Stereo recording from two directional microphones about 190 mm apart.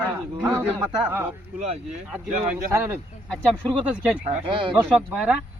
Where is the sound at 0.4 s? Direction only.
10° right (ahead or behind).